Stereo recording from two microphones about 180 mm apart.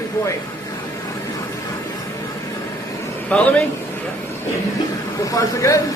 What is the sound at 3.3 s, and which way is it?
Speech, 5° left (ahead or behind).